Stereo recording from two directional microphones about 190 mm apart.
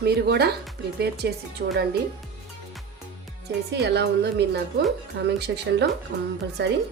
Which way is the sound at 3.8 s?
60° right (ahead or behind).